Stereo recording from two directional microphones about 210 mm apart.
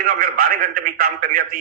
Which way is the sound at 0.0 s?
45° right (ahead or behind).